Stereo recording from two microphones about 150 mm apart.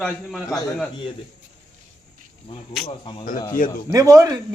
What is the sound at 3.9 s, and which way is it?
Speech, 20° right (ahead or behind).